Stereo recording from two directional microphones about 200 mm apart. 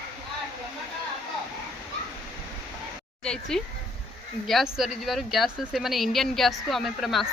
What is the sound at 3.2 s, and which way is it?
Speech, 5° left (ahead or behind).